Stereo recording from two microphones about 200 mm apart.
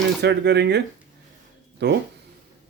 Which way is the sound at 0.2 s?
55° right (ahead or behind).